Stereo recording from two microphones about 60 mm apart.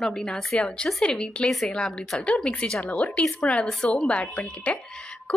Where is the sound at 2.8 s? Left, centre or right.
Left.